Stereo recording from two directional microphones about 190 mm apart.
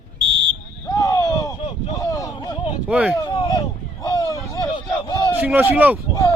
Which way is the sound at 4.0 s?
20° left (ahead or behind).